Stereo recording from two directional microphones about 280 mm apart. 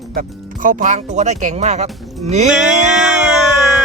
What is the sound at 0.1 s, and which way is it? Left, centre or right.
Speech, right.